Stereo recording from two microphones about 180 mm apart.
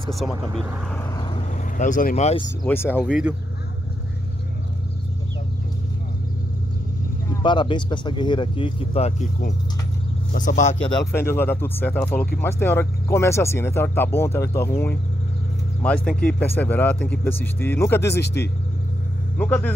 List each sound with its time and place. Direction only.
0.1 s speech: centre (ahead or behind)
1.8 s speech: 45° left (ahead or behind)
2.6 s speech: 10° left (ahead or behind)
3.1 s speech: 5° right (ahead or behind)
7.4 s speech: 25° left (ahead or behind)
10.3 s speech: 45° left (ahead or behind)
11.1 s speech: 10° left (ahead or behind)
15.8 s speech: 5° left (ahead or behind)
18.2 s speech: 65° left (ahead or behind)
19.3 s speech: 10° left (ahead or behind)